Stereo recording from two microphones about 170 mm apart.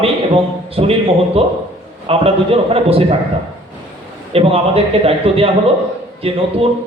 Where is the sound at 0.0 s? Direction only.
35° right (ahead or behind).